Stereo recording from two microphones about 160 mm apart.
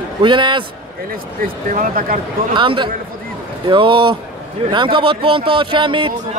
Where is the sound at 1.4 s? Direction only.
60° right (ahead or behind).